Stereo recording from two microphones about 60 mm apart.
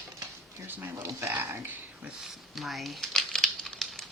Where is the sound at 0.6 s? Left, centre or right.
Right.